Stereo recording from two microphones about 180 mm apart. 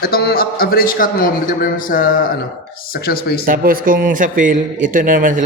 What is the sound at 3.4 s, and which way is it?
Speech, 50° right (ahead or behind).